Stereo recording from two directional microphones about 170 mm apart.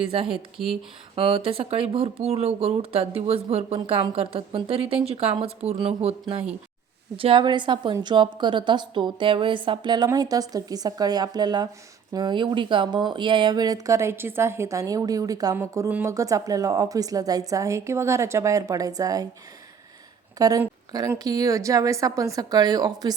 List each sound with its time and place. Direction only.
0.3 s speech: 5° right (ahead or behind)
1.1 s speech: 30° right (ahead or behind)
7.2 s a woman's voice: 30° right (ahead or behind)
20.4 s a woman's voice: 20° right (ahead or behind)